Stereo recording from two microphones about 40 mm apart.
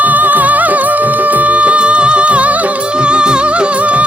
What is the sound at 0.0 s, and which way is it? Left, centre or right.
Music, right.